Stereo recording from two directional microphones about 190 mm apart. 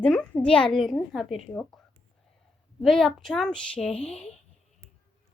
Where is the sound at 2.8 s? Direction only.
Centre (ahead or behind).